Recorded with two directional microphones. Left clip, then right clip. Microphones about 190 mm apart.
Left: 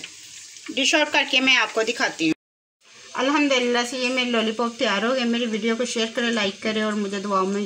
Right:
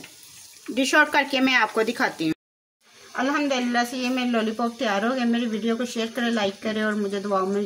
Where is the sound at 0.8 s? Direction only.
50° right (ahead or behind).